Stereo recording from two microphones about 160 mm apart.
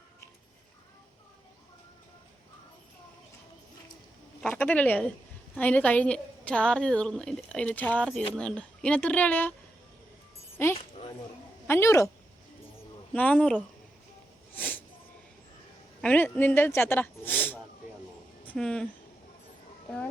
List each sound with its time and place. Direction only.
4.4 s a woman's voice: 5° left (ahead or behind)
11.7 s a woman's voice: 15° left (ahead or behind)
13.1 s a woman's voice: 10° left (ahead or behind)
14.5 s a sound: 10° left (ahead or behind)
16.0 s speech: 10° left (ahead or behind)